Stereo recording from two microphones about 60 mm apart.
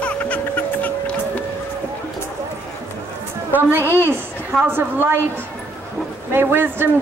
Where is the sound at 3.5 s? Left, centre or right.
Right.